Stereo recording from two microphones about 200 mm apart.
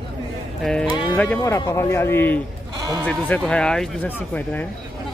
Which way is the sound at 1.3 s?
15° left (ahead or behind).